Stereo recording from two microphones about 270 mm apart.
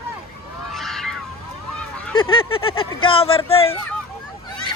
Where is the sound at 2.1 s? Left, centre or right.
Centre.